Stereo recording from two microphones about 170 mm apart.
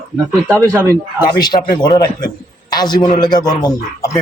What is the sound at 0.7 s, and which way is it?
Speech, 20° right (ahead or behind).